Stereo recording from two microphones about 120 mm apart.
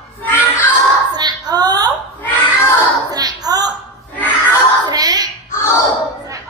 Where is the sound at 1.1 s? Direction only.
35° right (ahead or behind).